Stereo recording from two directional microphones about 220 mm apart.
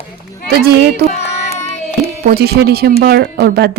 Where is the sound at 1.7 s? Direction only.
30° left (ahead or behind).